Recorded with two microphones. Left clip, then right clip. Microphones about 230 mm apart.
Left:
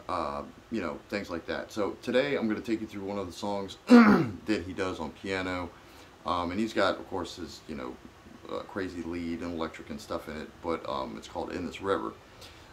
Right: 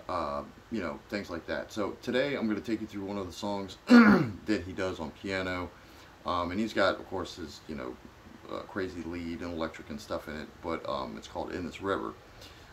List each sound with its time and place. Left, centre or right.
0.0 s speech: centre